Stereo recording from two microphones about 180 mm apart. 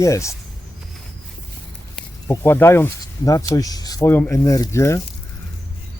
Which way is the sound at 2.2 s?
15° left (ahead or behind).